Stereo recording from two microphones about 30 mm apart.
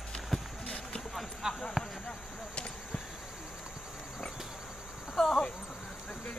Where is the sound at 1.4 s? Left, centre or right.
Right.